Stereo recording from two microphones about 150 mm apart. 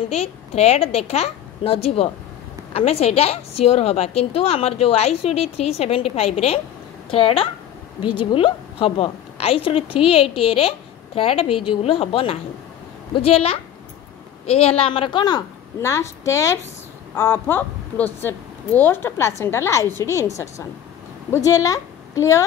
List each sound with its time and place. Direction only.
0.1 s a woman's voice: 45° left (ahead or behind); by 22.4 s 20° left (ahead or behind)